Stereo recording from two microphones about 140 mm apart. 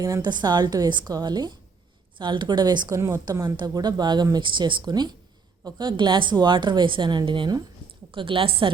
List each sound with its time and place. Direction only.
0.0 s a woman's voice: 30° right (ahead or behind)